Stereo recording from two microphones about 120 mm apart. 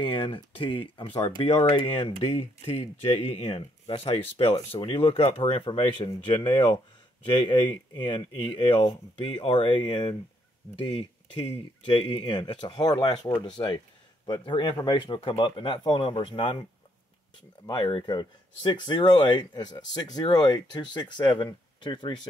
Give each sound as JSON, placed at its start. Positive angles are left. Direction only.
{"t": 0.0, "sound": "speech", "side_deg": 45}
{"t": 2.0, "sound": "speech", "side_deg": 45}
{"t": 2.2, "sound": "speech", "side_deg": 65}
{"t": 14.2, "sound": "speech", "side_deg": 45}
{"t": 15.1, "sound": "speech", "side_deg": 50}
{"t": 17.6, "sound": "speech", "side_deg": 40}